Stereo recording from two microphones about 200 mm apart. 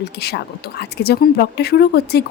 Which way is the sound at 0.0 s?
55° left (ahead or behind).